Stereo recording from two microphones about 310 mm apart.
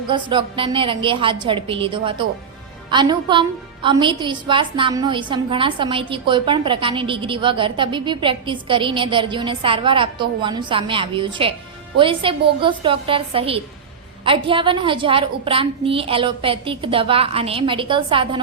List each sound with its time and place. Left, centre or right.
0.1 s a woman's voice: centre